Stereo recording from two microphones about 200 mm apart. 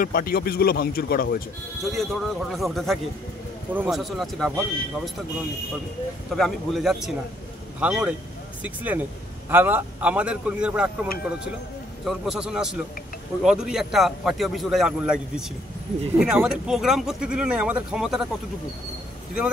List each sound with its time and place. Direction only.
0.0 s speech: 45° left (ahead or behind)
1.8 s a man's voice: centre (ahead or behind)
6.3 s a man's voice: centre (ahead or behind)